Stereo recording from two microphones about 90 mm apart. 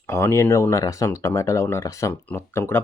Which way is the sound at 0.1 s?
30° left (ahead or behind).